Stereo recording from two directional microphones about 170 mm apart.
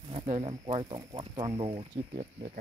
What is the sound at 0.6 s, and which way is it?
Speech, 25° right (ahead or behind).